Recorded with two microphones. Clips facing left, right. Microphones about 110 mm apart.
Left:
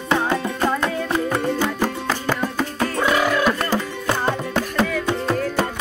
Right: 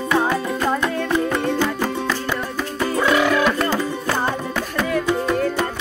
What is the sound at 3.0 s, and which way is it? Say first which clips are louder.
Music: right 2 dB; 5° left (ahead or behind).